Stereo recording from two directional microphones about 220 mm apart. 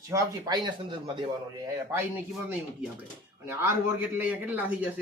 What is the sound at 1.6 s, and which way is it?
Speech, 10° right (ahead or behind).